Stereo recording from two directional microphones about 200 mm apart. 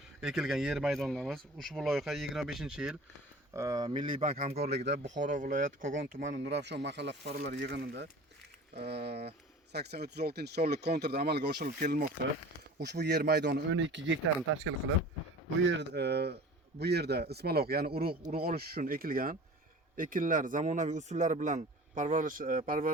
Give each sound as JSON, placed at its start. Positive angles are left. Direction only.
{"t": 0.2, "sound": "speech", "side_deg": 0}
{"t": 3.5, "sound": "speech", "side_deg": -15}
{"t": 4.4, "sound": "speech", "side_deg": -35}
{"t": 6.4, "sound": "speech", "side_deg": -60}
{"t": 12.8, "sound": "speech", "side_deg": -55}